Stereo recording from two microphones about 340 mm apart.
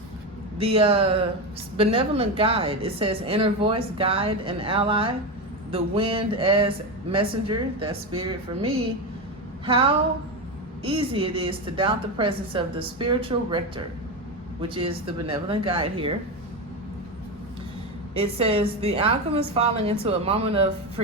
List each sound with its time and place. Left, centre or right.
0.6 s a woman's voice: centre
18.2 s a woman's voice: centre